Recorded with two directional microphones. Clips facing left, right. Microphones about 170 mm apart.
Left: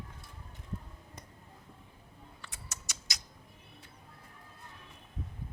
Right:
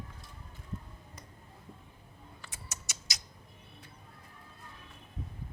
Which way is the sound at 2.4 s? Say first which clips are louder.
Right 1 dB; centre (ahead or behind).